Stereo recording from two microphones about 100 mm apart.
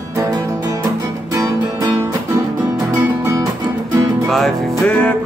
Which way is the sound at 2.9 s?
35° right (ahead or behind).